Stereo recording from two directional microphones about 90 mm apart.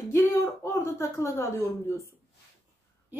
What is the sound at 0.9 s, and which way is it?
Speech, 30° left (ahead or behind).